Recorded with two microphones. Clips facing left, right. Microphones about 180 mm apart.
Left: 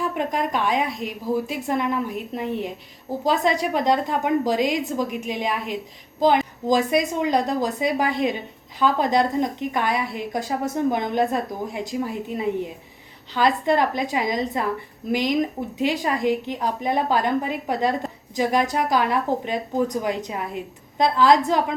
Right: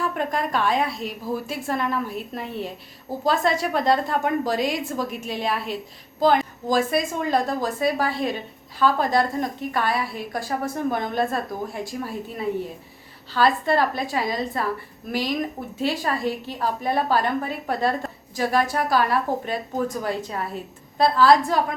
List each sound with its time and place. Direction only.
0.0 s a woman's voice: 15° left (ahead or behind)